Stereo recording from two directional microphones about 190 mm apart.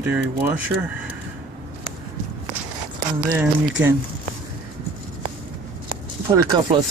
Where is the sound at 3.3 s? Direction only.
10° right (ahead or behind).